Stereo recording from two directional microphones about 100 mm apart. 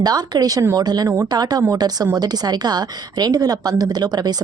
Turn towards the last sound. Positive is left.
turn(degrees=-45)  # may be behind; listen again after turning